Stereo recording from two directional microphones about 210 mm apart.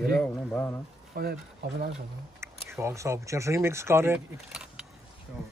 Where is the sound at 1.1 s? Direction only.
45° right (ahead or behind).